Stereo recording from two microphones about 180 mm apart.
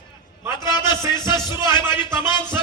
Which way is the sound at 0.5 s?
25° left (ahead or behind).